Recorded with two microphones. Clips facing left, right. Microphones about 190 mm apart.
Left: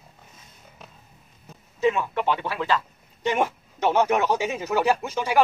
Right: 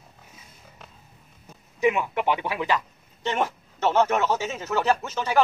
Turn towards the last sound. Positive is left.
turn(degrees=10)  # may be behind; listen again after turning